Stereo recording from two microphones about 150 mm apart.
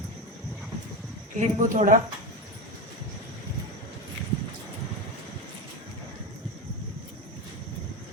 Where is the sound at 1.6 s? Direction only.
60° right (ahead or behind).